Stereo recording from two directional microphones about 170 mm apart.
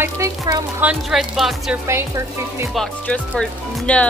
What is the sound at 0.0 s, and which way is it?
Speech, 15° right (ahead or behind).